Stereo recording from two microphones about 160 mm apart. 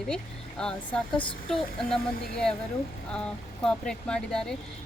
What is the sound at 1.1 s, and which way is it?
Speech, 30° left (ahead or behind).